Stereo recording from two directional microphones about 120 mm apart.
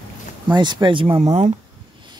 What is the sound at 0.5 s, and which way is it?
Speech, 40° right (ahead or behind).